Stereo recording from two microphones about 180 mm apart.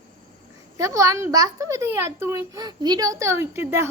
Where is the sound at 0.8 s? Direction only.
15° right (ahead or behind).